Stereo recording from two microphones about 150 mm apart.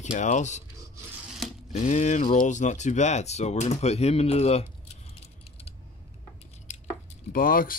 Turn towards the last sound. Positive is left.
turn(degrees=70)  # may be behind; listen again after turning